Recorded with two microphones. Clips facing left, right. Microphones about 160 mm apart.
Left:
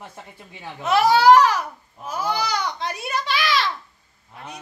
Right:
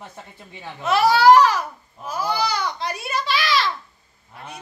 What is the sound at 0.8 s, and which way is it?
Speech, 20° left (ahead or behind).